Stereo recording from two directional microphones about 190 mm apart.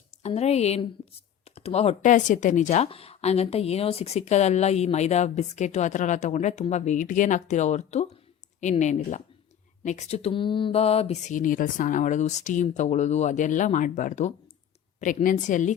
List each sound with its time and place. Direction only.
0.2 s speech: 35° left (ahead or behind)